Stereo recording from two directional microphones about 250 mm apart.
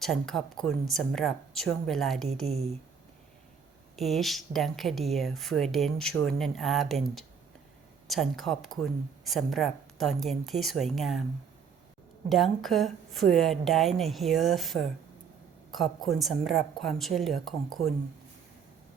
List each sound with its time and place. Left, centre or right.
0.0 s speech: centre
2.5 s speech: right
3.9 s speech: centre
12.3 s speech: centre